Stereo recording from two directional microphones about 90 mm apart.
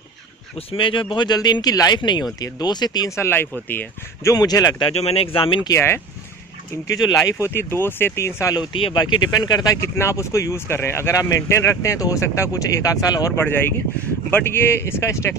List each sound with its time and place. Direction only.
0.6 s speech: 80° left; by 2.0 s 45° left (ahead or behind)
2.0 s speech: 60° left (ahead or behind)
3.2 s speech: 25° left (ahead or behind)
4.3 s speech: 40° left (ahead or behind)
4.8 s speech: 90° left
5.7 s speech: 30° left (ahead or behind)
7.2 s speech: 30° left (ahead or behind)
8.5 s speech: 75° left (ahead or behind)
8.9 s speech: 55° left (ahead or behind)
9.8 s speech: 30° left (ahead or behind)
14.3 s speech: 25° left (ahead or behind)